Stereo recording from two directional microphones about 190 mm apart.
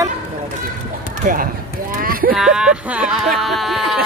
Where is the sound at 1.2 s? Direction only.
40° right (ahead or behind).